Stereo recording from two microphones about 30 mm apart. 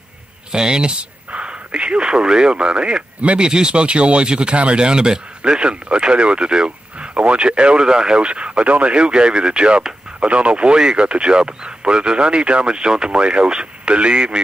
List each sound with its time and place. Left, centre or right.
0.5 s speech: right
2.5 s speech: right
7.2 s speech: right
7.8 s speech: right
8.2 s speech: right
8.9 s speech: right
10.2 s speech: right
10.8 s speech: right